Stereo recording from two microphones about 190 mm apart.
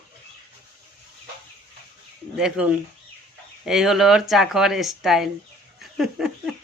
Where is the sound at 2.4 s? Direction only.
5° right (ahead or behind).